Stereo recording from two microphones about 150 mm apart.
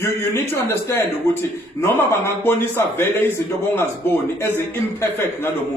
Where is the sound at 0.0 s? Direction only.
15° left (ahead or behind).